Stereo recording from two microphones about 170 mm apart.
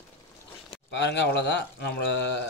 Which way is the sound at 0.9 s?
90° left.